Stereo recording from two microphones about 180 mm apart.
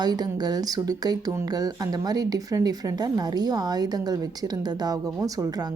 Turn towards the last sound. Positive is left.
turn(degrees=-20)  # may be behind; listen again after turning